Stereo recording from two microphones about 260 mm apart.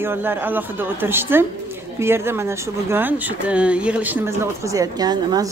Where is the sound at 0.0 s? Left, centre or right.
Centre.